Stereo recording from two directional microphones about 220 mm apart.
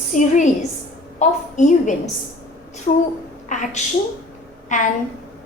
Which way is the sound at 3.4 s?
35° left (ahead or behind).